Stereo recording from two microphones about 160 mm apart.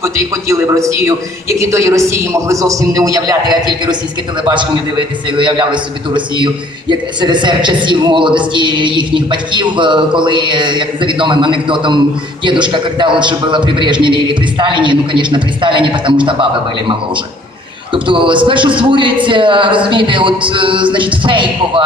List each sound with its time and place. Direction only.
0.0 s a man's voice: 20° right (ahead or behind)
17.9 s speech: 30° right (ahead or behind)